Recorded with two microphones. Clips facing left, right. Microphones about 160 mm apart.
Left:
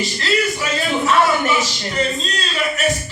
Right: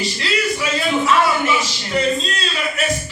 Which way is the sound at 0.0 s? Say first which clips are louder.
Left 2 dB; 40° left (ahead or behind).